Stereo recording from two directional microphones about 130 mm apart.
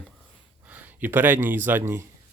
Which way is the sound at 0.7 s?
15° right (ahead or behind).